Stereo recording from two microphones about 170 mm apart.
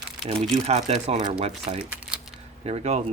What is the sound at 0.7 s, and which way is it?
Speech, 40° right (ahead or behind).